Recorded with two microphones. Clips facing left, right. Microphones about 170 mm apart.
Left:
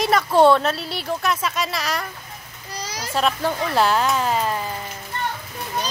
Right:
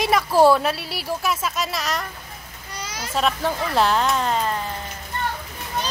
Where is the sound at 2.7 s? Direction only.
35° left (ahead or behind).